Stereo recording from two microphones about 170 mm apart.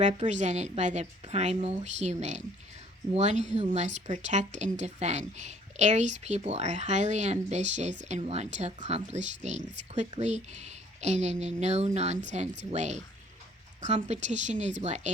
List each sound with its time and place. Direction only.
0.0 s a woman's voice: 45° right (ahead or behind)
3.2 s a woman's voice: 40° right (ahead or behind)